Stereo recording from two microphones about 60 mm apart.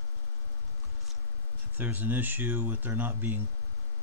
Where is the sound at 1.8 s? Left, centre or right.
Right.